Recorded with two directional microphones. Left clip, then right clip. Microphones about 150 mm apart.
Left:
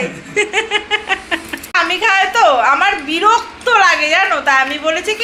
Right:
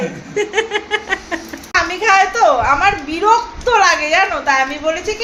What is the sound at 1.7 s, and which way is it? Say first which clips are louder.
A woman's voice: even; 10° left (ahead or behind).